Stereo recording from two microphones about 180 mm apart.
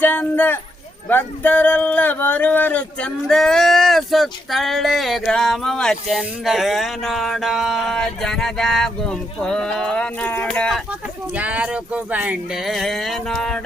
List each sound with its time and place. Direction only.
0.0 s speech: 10° left (ahead or behind)
11.3 s speech: 5° right (ahead or behind)